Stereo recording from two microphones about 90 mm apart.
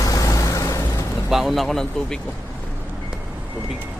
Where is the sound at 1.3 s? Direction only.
5° right (ahead or behind).